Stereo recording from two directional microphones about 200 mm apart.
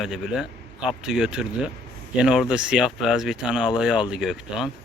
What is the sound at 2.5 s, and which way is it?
Speech, 5° right (ahead or behind).